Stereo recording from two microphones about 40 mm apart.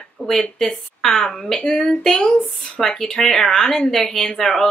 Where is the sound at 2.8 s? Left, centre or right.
Centre.